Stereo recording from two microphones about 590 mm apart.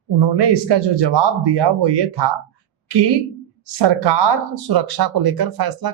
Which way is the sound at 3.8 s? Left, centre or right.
Right.